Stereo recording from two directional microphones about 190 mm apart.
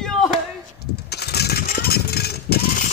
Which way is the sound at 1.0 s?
60° left (ahead or behind).